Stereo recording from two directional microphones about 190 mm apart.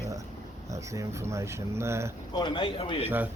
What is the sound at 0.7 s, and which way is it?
Speech, 15° right (ahead or behind).